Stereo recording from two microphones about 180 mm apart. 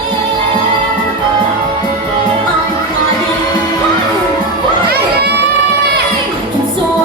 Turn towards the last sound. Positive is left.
turn(degrees=-65)  # may be behind; listen again after turning